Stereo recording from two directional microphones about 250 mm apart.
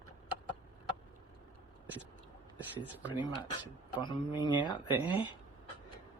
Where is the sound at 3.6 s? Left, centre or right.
Centre.